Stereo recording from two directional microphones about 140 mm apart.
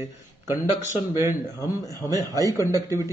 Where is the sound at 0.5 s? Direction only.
20° right (ahead or behind).